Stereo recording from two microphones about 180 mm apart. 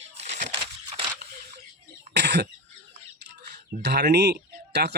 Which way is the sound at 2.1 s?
70° right (ahead or behind).